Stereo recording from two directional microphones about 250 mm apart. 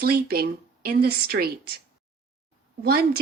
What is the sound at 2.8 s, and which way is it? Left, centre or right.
Speech, right.